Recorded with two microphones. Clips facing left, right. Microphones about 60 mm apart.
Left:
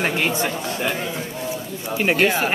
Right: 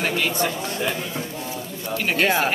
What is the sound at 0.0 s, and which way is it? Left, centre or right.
Speech, left.